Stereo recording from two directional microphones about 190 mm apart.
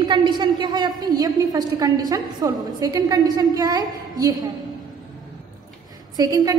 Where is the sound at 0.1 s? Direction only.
25° right (ahead or behind).